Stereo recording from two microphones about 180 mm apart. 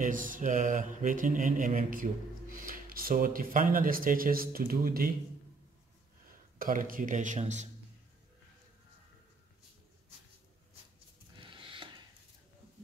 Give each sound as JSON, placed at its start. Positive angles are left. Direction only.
{"t": 0.0, "sound": "mantra", "side_deg": -50}
{"t": 6.6, "sound": "mantra", "side_deg": -50}
{"t": 11.3, "sound": "a sound", "side_deg": -30}